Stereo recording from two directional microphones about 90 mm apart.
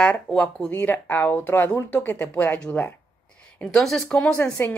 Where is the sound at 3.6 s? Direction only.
5° left (ahead or behind).